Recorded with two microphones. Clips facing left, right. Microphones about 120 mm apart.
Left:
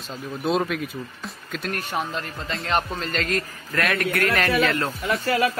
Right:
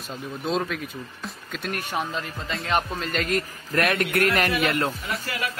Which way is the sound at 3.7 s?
25° right (ahead or behind).